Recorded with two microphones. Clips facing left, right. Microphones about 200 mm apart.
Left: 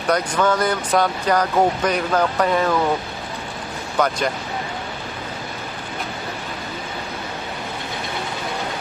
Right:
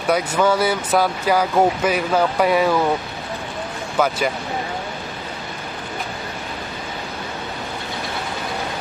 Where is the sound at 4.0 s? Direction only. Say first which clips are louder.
Right 1 dB; 5° right (ahead or behind).